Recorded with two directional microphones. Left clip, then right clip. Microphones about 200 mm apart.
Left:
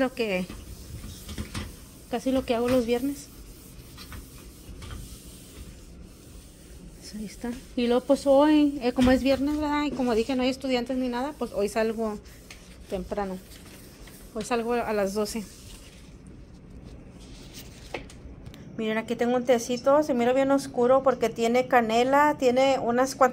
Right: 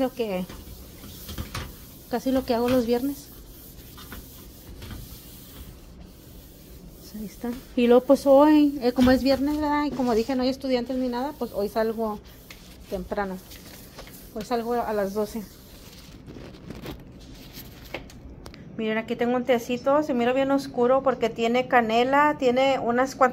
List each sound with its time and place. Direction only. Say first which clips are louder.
0.0 s a woman's voice: even; centre (ahead or behind)
2.0 s a woman's voice: right 1 dB; 15° right (ahead or behind)
7.7 s a woman's voice: right 6 dB; 20° right (ahead or behind); by 13.3 s 5° right (ahead or behind)
14.3 s a woman's voice: right 1 dB; centre (ahead or behind)
18.8 s a woman's voice: right 1 dB; 5° left (ahead or behind)